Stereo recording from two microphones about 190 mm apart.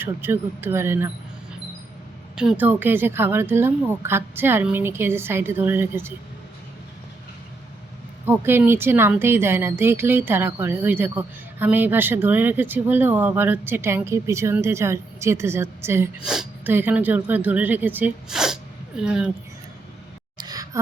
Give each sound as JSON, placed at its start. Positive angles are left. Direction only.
{"t": 0.0, "sound": "speech", "side_deg": -10}
{"t": 2.3, "sound": "speech", "side_deg": -5}
{"t": 8.2, "sound": "speech", "side_deg": -10}
{"t": 20.4, "sound": "a sound", "side_deg": -20}